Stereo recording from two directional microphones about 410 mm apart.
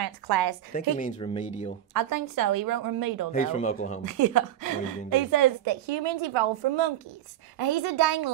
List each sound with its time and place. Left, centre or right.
0.0 s a woman's voice: right
0.7 s speech: centre
2.0 s a woman's voice: right
3.3 s speech: centre
4.0 s a woman's voice: right
5.7 s a woman's voice: right
7.5 s a woman's voice: right